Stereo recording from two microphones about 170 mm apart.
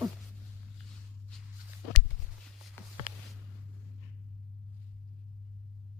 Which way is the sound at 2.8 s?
15° left (ahead or behind).